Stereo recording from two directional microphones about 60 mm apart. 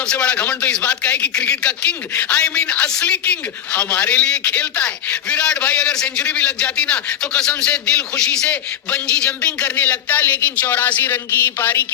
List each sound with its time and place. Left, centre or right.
0.0 s a man's voice: centre